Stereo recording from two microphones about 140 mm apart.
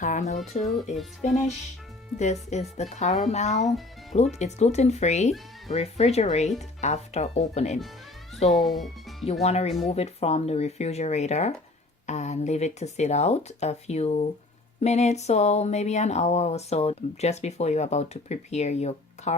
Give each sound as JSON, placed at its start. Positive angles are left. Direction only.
{"t": 0.0, "sound": "speech", "side_deg": 60}
{"t": 2.1, "sound": "speech", "side_deg": 55}
{"t": 8.4, "sound": "speech", "side_deg": 0}
{"t": 9.4, "sound": "speech", "side_deg": 50}